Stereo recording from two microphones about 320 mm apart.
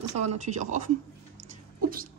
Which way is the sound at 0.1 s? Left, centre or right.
Right.